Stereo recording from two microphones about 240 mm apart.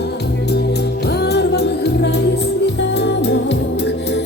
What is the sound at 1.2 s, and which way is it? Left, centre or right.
Music, left.